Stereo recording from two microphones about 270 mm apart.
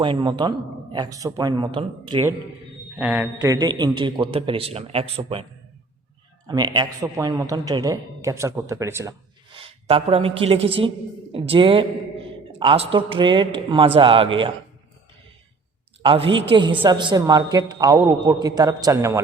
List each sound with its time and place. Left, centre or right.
0.0 s a woman's voice: centre
3.0 s a man's voice: centre; by 5.5 s right
6.5 s a woman's voice: centre
16.0 s a woman's voice: centre